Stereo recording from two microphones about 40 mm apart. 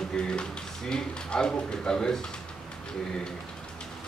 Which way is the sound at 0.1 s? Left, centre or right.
Left.